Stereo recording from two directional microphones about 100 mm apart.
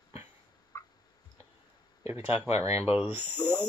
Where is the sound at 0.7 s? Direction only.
30° left (ahead or behind).